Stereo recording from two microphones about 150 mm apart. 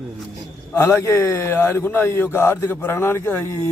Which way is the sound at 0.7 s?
20° left (ahead or behind).